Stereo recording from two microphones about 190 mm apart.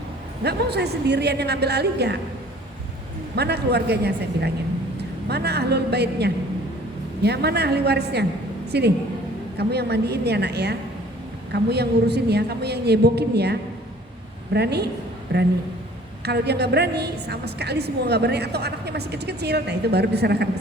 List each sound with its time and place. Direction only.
0.4 s a woman's voice: 60° right (ahead or behind)
3.3 s a woman's voice: 60° right (ahead or behind)